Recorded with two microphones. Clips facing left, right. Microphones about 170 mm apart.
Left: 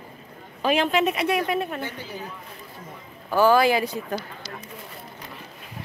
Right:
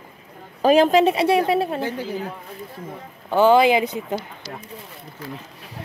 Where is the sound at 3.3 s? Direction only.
20° right (ahead or behind).